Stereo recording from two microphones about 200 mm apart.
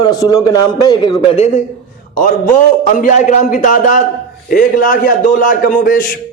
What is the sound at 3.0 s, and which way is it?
A man's voice, 40° left (ahead or behind).